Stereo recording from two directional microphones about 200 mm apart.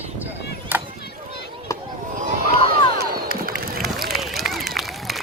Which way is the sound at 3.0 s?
50° right (ahead or behind).